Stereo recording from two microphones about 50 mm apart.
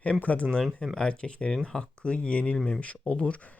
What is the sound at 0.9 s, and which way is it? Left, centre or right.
Speech, centre.